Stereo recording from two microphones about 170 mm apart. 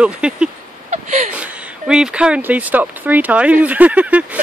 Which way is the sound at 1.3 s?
5° right (ahead or behind).